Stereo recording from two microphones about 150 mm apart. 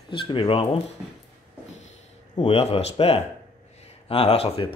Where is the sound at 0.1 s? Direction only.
35° left (ahead or behind).